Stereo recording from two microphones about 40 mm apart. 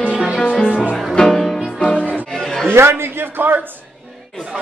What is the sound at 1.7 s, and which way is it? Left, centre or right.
Music, left.